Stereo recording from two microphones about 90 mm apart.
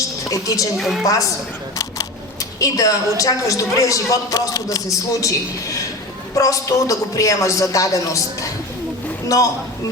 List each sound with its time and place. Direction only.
0.3 s a man's voice: 40° left (ahead or behind)
0.8 s a woman's voice: centre (ahead or behind)
2.6 s a man's voice: 40° left (ahead or behind)